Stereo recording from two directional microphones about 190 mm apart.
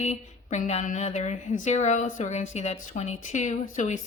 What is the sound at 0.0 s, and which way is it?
Speech, 35° left (ahead or behind).